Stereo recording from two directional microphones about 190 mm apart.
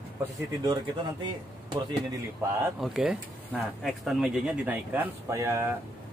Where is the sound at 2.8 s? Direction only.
5° right (ahead or behind).